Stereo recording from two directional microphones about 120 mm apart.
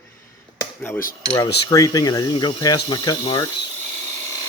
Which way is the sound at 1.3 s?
30° left (ahead or behind).